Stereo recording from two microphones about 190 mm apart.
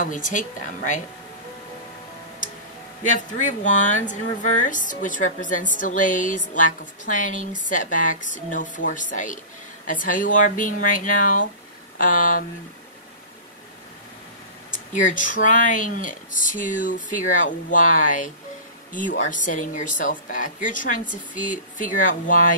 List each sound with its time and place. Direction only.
0.0 s speech: 45° left (ahead or behind)
3.0 s speech: 40° left (ahead or behind)
14.9 s speech: 45° left (ahead or behind)